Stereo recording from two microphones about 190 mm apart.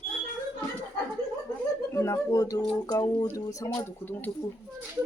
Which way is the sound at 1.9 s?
15° left (ahead or behind).